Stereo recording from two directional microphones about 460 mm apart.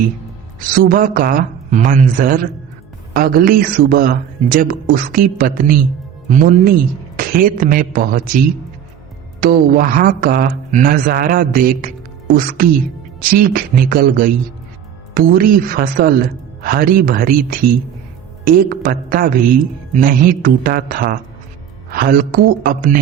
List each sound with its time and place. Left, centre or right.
0.8 s a man's voice: centre
9.4 s a man's voice: centre